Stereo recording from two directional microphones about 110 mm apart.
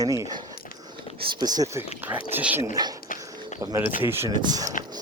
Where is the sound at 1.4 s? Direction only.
35° right (ahead or behind).